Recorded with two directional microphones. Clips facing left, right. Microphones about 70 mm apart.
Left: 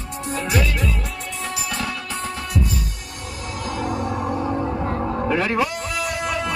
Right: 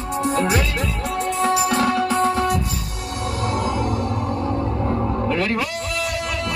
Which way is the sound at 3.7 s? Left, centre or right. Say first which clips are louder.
Right 2 dB; centre.